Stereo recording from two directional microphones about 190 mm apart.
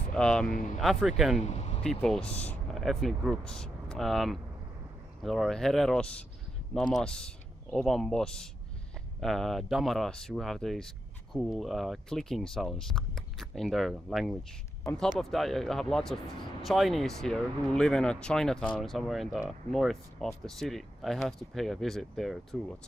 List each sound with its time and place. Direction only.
0.1 s speech: 5° left (ahead or behind)
1.4 s vehicle: 35° left (ahead or behind)
1.8 s speech: 5° left (ahead or behind)